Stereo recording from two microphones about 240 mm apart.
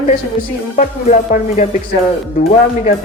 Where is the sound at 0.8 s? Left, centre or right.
Left.